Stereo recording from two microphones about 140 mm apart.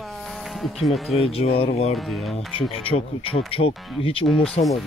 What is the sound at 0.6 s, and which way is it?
Speech, centre (ahead or behind).